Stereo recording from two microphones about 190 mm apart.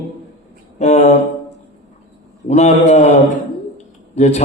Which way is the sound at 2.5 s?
35° left (ahead or behind).